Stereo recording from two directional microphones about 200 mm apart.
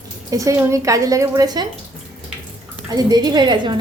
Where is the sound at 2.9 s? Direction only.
20° right (ahead or behind).